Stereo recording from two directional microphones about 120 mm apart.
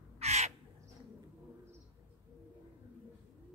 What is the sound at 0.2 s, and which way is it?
Crow, 65° right (ahead or behind).